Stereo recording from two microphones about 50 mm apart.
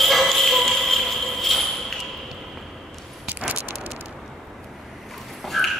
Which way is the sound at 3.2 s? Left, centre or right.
Right.